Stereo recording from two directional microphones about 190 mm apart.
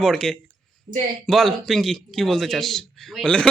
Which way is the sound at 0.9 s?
50° right (ahead or behind).